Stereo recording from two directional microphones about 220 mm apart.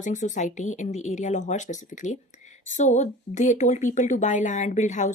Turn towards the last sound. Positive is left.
turn(degrees=35)  # may be behind; listen again after turning